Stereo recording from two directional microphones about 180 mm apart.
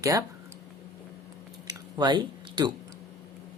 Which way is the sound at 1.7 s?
25° right (ahead or behind).